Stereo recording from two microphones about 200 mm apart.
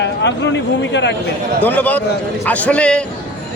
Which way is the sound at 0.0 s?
60° left (ahead or behind).